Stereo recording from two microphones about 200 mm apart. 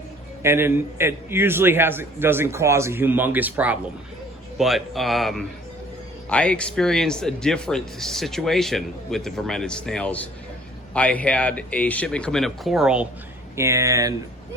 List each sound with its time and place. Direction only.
0.4 s a man's voice: 10° right (ahead or behind)
13.6 s a man's voice: 15° right (ahead or behind)